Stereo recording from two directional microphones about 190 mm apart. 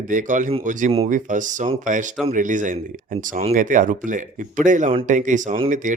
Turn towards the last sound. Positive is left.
turn(degrees=-40)  # may be behind; listen again after turning